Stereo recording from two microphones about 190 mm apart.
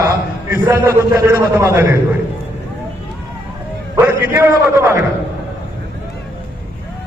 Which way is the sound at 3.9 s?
10° right (ahead or behind).